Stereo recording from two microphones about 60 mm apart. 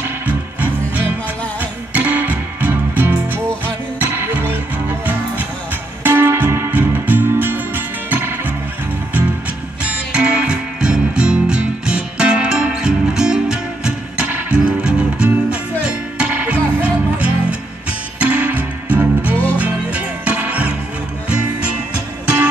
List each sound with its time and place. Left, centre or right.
0.3 s music: right
6.7 s music: right
9.8 s music: centre